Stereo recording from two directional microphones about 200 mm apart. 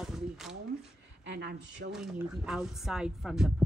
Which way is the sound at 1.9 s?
Centre (ahead or behind).